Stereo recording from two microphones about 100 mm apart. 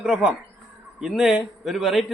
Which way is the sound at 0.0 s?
5° right (ahead or behind).